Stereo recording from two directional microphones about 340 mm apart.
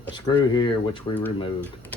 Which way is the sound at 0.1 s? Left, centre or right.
Centre.